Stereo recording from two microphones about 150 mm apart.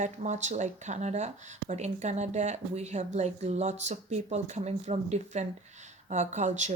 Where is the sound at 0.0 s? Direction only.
50° right (ahead or behind).